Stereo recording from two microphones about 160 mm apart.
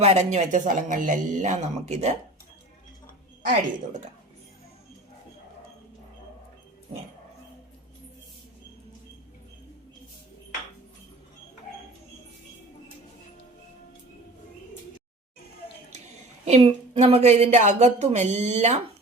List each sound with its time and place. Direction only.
0.0 s a woman's voice: 45° right (ahead or behind)
16.5 s a woman's voice: 40° right (ahead or behind)